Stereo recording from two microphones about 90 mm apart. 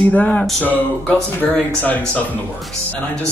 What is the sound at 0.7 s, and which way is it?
Speech, 20° left (ahead or behind).